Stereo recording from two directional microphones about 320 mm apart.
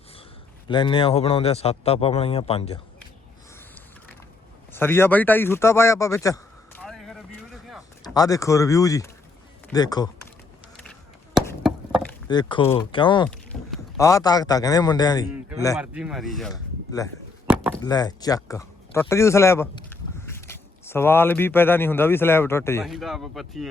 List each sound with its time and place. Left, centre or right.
0.7 s a man's voice: centre
4.7 s a sound: centre
8.0 s a man's voice: centre
11.3 s chop: centre
12.3 s a man's voice: centre
13.5 s a man's voice: centre
15.7 s speech: centre
17.4 s chop: centre
17.8 s a man's voice: centre